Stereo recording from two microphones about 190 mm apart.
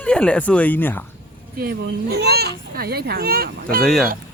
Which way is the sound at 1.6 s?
55° right (ahead or behind).